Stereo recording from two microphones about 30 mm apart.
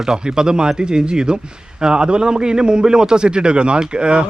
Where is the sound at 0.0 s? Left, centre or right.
Right.